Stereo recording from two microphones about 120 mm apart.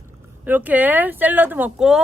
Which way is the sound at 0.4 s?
15° right (ahead or behind).